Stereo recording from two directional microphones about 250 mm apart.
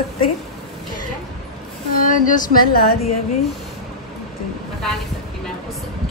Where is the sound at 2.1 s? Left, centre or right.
Left.